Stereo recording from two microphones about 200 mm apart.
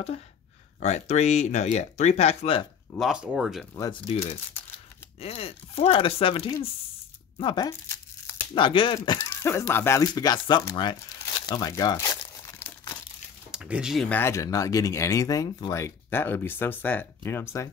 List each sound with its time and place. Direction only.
0.7 s speech: 35° left (ahead or behind)
3.0 s speech: 5° right (ahead or behind)
5.2 s speech: 30° left (ahead or behind)
7.3 s tearing: 25° left (ahead or behind)
8.5 s speech: 25° left (ahead or behind); by 13.0 s 10° left (ahead or behind)
13.5 s speech: 5° right (ahead or behind); by 17.6 s 10° left (ahead or behind)